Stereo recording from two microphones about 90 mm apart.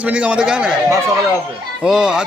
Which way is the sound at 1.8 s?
10° right (ahead or behind).